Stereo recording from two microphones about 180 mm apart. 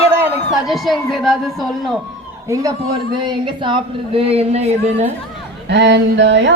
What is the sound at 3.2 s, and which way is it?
A woman's voice, 25° right (ahead or behind).